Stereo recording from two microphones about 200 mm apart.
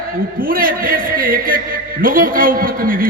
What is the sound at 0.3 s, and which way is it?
A man's voice, 45° right (ahead or behind).